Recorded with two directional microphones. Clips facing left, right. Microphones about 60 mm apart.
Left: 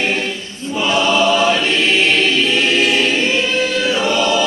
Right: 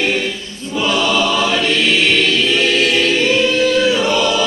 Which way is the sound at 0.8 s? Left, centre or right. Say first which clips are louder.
Left 2 dB; left.